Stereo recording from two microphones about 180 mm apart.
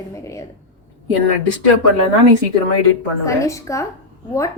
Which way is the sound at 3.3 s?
15° left (ahead or behind).